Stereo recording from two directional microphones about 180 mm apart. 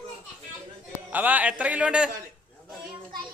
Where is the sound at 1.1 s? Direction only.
10° right (ahead or behind).